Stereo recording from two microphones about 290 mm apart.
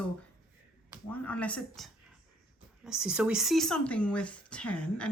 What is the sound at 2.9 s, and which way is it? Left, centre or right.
Speech, centre.